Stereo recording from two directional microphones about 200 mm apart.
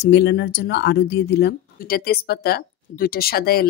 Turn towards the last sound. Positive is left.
turn(degrees=50)  # may be behind; listen again after turning